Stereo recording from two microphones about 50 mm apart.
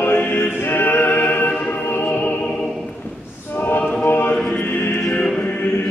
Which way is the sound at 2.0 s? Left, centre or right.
Left.